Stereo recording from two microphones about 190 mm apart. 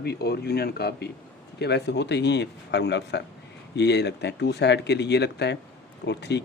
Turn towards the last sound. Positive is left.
turn(degrees=65)  # may be behind; listen again after turning